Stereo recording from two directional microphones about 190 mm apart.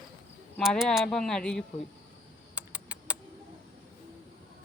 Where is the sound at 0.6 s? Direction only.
Centre (ahead or behind).